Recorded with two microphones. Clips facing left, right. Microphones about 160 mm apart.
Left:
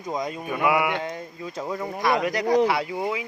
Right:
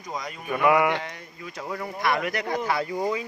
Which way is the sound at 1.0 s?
25° left (ahead or behind).